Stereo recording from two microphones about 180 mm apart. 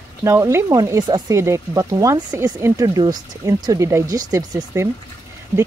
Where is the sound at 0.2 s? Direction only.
15° right (ahead or behind).